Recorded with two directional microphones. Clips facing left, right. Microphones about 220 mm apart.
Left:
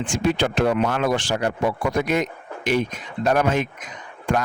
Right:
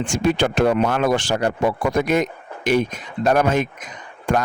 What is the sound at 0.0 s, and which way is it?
Speech, 45° right (ahead or behind).